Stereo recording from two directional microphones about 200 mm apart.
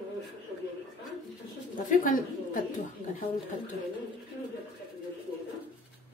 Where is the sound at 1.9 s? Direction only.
40° left (ahead or behind).